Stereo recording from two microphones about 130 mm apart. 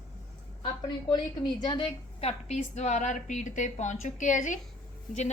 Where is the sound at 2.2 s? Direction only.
60° left (ahead or behind).